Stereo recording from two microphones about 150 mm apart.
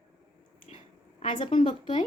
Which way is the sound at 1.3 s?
35° left (ahead or behind).